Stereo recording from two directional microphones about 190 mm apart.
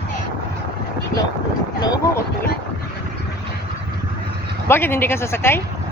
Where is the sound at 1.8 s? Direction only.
20° left (ahead or behind).